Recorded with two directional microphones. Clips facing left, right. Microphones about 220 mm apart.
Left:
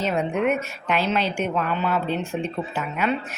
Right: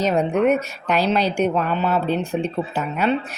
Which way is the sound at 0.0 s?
40° right (ahead or behind).